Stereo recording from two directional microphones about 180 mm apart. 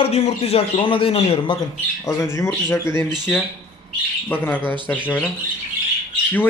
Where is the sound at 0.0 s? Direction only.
35° left (ahead or behind).